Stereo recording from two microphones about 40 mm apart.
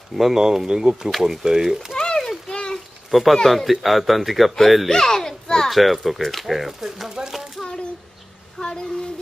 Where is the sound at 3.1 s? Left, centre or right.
Centre.